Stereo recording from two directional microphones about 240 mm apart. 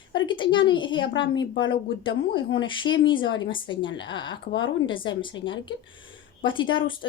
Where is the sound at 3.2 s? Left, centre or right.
Left.